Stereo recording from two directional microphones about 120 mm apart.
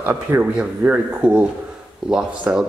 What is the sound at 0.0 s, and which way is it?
Speech, 20° right (ahead or behind).